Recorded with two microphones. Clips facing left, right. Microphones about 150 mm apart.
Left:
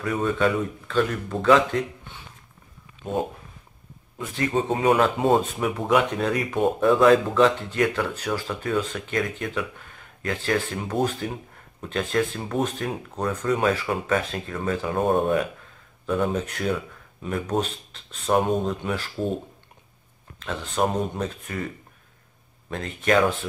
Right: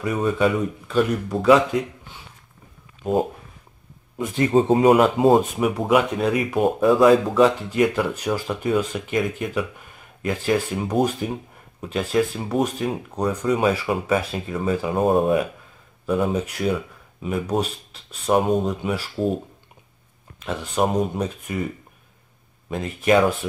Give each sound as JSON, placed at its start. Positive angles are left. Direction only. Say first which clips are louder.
{"t": 0.0, "sound": "speech", "louder": "right 2 dB", "side_deg": -5}
{"t": 0.8, "sound": "speech", "louder": "right 4 dB", "side_deg": -15}
{"t": 4.2, "sound": "speech", "louder": "right 6 dB", "side_deg": -20}
{"t": 4.6, "sound": "speech", "louder": "right 5 dB", "side_deg": -30}
{"t": 5.4, "sound": "speech", "louder": "right 4 dB", "side_deg": -10}